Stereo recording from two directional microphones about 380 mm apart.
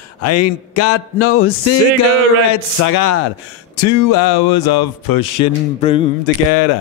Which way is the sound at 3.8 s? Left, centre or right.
Left.